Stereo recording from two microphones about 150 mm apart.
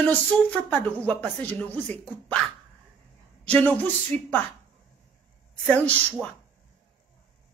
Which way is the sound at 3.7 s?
10° left (ahead or behind).